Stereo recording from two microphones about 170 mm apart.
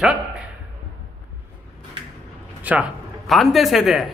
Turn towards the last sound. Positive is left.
turn(degrees=0)  # may be behind; listen again after turning